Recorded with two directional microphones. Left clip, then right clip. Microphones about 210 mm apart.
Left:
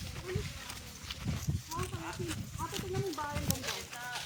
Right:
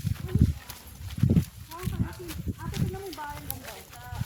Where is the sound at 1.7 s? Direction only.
5° left (ahead or behind).